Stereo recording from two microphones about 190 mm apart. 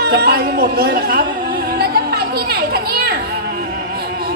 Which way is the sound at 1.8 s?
55° right (ahead or behind).